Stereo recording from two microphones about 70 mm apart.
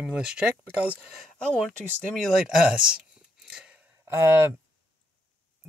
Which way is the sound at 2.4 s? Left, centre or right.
Centre.